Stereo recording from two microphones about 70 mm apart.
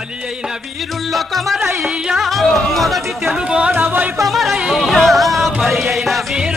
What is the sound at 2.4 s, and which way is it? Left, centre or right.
Chatter, centre.